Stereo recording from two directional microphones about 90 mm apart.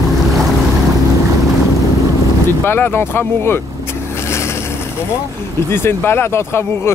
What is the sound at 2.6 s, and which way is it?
Speech, 25° left (ahead or behind).